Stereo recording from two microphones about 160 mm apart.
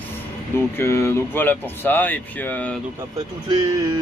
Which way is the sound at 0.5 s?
15° left (ahead or behind).